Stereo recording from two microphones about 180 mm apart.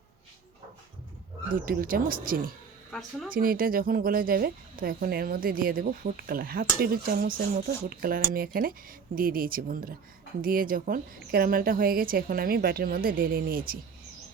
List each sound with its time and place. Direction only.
1.5 s speech: 50° right (ahead or behind)